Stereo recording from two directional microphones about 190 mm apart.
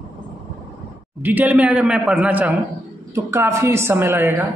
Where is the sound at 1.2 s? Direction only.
10° right (ahead or behind).